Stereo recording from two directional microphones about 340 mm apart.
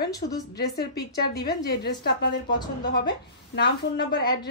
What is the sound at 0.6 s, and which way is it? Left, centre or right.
A woman's voice, left.